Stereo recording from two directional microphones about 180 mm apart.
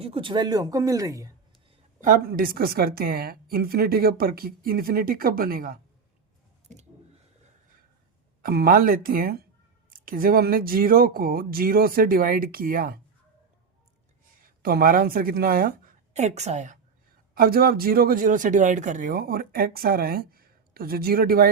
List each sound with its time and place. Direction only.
0.0 s speech: 30° right (ahead or behind)
2.0 s speech: 50° right (ahead or behind)
8.4 s speech: 55° right (ahead or behind)
14.4 s speech: 55° right (ahead or behind)
16.1 s a woman's voice: 40° right (ahead or behind)
17.3 s speech: 55° right (ahead or behind)